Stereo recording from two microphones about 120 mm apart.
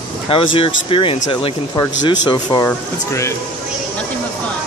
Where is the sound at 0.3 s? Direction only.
50° left (ahead or behind).